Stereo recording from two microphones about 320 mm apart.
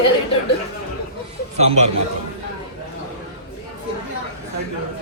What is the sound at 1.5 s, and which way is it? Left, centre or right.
Speech, right.